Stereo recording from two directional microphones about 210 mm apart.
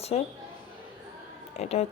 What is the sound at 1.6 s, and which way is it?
Speech, 30° left (ahead or behind).